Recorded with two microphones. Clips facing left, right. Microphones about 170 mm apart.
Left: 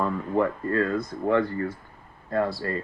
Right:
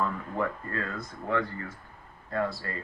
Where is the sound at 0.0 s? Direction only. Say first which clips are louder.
Left 6 dB; 35° left (ahead or behind).